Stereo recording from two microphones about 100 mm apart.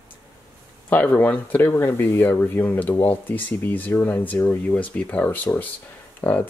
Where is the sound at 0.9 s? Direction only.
15° left (ahead or behind).